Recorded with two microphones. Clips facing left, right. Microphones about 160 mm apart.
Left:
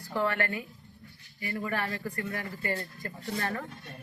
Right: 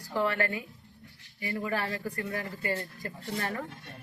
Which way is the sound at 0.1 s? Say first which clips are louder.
Right 1 dB; 15° right (ahead or behind).